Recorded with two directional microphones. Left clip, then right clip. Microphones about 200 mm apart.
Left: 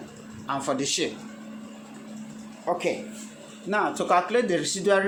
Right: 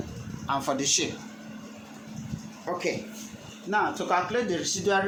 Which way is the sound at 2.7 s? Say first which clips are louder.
Left 5 dB; 15° left (ahead or behind).